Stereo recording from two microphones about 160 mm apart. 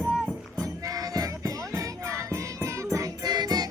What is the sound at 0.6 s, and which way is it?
Music, 20° right (ahead or behind).